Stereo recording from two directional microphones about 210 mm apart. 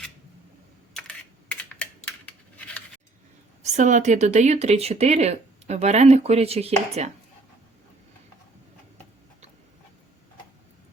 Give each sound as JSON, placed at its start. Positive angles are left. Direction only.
{"t": 0.9, "sound": "computer keyboard", "side_deg": 5}
{"t": 3.6, "sound": "speech", "side_deg": -35}